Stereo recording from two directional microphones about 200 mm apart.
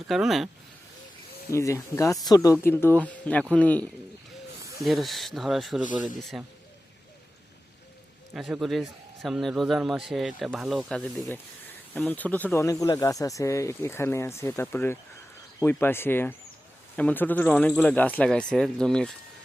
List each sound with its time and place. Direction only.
0.1 s a man's voice: centre (ahead or behind)
1.5 s a man's voice: 15° left (ahead or behind)
5.8 s speech: 40° left (ahead or behind)
8.3 s a man's voice: centre (ahead or behind)